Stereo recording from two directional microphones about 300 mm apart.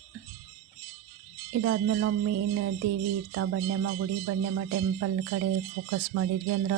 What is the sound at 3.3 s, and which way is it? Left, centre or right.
Speech, right.